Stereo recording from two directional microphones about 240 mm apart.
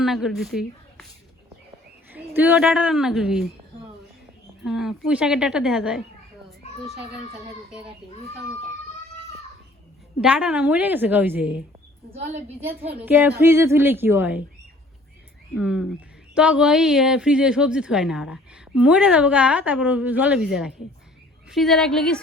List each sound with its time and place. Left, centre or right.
0.0 s speech: centre
2.1 s a woman's voice: centre
4.6 s a woman's voice: centre
10.2 s a woman's voice: centre
12.1 s a woman's voice: right
12.8 s a woman's voice: centre
15.5 s a woman's voice: centre